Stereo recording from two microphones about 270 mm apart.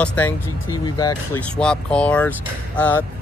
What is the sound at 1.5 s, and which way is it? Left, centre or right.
Speech, centre.